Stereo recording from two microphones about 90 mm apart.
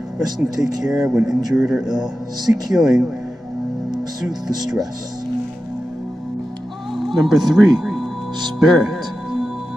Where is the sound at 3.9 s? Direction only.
45° right (ahead or behind).